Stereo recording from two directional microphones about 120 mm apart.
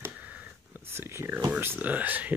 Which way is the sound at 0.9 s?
20° right (ahead or behind).